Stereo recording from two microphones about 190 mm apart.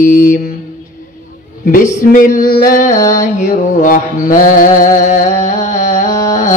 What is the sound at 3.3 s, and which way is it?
Mantra, 40° left (ahead or behind).